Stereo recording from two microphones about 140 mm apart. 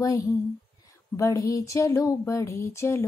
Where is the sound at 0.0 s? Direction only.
25° left (ahead or behind).